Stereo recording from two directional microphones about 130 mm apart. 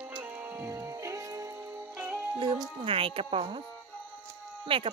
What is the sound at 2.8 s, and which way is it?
Speech, 45° right (ahead or behind).